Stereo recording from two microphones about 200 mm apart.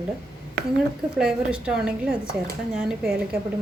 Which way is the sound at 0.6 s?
55° right (ahead or behind).